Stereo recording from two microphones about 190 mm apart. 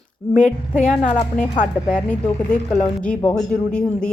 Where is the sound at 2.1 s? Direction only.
5° left (ahead or behind).